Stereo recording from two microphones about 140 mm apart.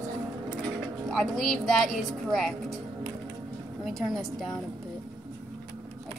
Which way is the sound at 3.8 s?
Centre (ahead or behind).